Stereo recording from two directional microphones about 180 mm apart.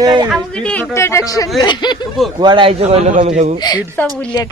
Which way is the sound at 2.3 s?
25° right (ahead or behind).